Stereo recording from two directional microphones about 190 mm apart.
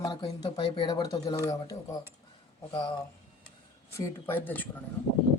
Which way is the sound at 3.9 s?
15° left (ahead or behind).